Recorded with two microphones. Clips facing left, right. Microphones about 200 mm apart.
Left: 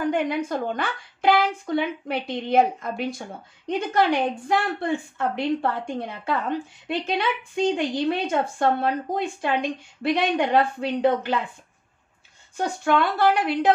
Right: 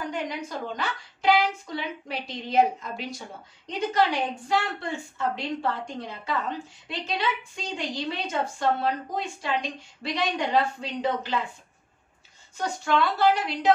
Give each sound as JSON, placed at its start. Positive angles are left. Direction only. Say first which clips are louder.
{"t": 0.0, "sound": "a woman's voice", "louder": "left 8 dB", "side_deg": 55}
{"t": 12.5, "sound": "a woman's voice", "louder": "left 3 dB", "side_deg": 55}